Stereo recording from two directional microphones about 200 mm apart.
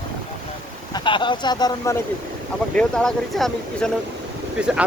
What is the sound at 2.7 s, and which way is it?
Speech, 5° left (ahead or behind).